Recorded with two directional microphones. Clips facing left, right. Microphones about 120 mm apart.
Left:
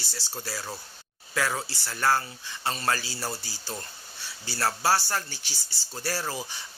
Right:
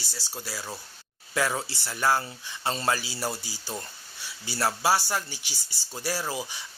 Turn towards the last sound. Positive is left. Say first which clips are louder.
# right 1 dB
turn(degrees=-10)  # may be behind; listen again after turning